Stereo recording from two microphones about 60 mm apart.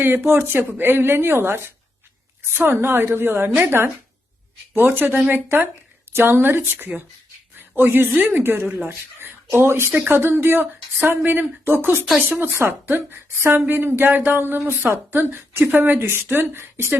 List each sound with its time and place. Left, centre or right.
0.0 s a woman's voice: right
9.6 s a woman's voice: right